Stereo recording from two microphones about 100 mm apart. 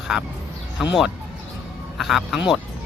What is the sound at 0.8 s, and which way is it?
Speech, 5° right (ahead or behind).